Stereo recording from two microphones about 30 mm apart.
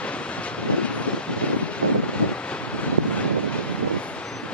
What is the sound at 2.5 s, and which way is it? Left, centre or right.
Vehicle, left.